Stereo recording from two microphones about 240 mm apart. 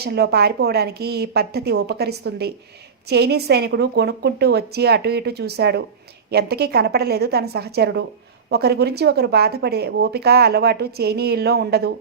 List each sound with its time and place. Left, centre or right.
0.0 s a woman's voice: right